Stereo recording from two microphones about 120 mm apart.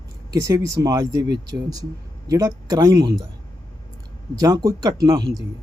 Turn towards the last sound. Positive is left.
turn(degrees=-35)  # may be behind; listen again after turning